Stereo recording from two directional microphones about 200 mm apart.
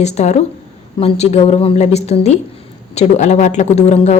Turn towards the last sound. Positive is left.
turn(degrees=35)  # may be behind; listen again after turning